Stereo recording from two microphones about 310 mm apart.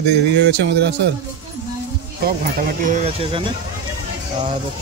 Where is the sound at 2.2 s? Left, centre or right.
Right.